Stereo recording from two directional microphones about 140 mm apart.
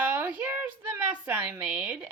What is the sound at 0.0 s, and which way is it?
A woman's voice, 10° right (ahead or behind).